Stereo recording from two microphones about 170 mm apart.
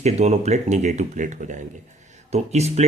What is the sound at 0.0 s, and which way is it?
Speech, 40° right (ahead or behind).